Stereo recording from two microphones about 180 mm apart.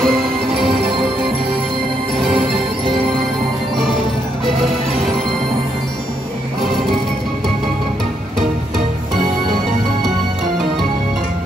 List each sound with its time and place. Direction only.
0.0 s music: centre (ahead or behind)
2.3 s music: 30° right (ahead or behind)